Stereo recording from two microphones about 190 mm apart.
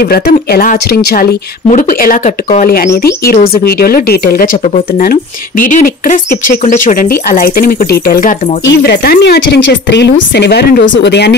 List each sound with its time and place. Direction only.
0.0 s speech: 55° left (ahead or behind)
8.6 s speech: 60° left (ahead or behind)